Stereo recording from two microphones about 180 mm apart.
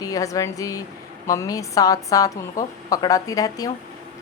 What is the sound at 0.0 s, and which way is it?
A woman's voice, 20° left (ahead or behind).